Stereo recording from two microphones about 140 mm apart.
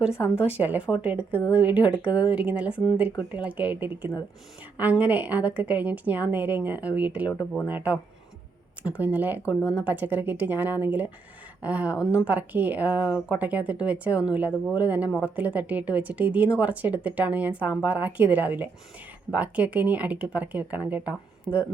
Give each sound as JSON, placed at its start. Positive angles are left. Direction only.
{"t": 0.5, "sound": "a woman's voice", "side_deg": -10}
{"t": 1.3, "sound": "speech", "side_deg": 15}
{"t": 1.5, "sound": "a woman's voice", "side_deg": -10}
{"t": 9.6, "sound": "speech", "side_deg": 15}
{"t": 9.8, "sound": "a woman's voice", "side_deg": -10}